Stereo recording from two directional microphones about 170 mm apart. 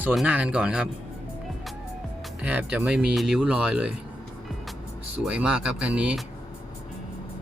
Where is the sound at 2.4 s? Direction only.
10° right (ahead or behind).